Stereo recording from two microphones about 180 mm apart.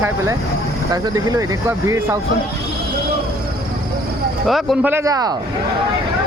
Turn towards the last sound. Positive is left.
turn(degrees=-20)  # may be behind; listen again after turning